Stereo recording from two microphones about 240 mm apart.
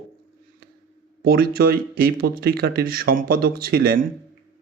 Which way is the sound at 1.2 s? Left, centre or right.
Right.